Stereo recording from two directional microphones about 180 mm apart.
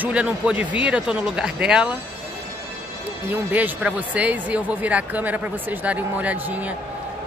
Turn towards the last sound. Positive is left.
turn(degrees=-10)  # may be behind; listen again after turning